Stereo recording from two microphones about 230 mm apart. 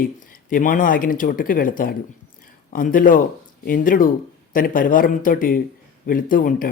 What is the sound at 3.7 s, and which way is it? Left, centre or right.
Speech, left.